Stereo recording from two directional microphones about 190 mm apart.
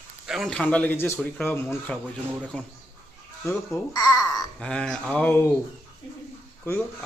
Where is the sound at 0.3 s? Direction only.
Centre (ahead or behind).